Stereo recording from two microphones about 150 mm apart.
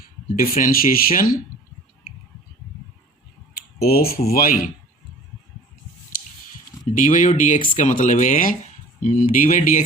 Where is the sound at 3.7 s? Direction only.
90° left.